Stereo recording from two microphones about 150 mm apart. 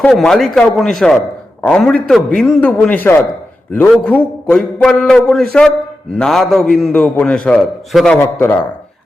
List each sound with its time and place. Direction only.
0.0 s a man's voice: 5° left (ahead or behind)
8.4 s a man's voice: 15° left (ahead or behind)